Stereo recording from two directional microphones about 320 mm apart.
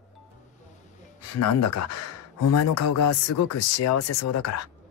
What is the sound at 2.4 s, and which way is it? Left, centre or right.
Speech, left.